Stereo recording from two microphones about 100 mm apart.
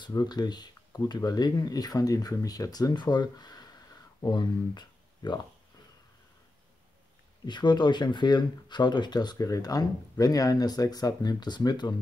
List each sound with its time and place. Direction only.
0.0 s speech: 45° left (ahead or behind)
7.4 s speech: 50° left (ahead or behind)